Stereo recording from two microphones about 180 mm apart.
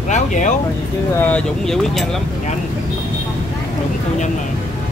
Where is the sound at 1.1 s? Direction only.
10° left (ahead or behind).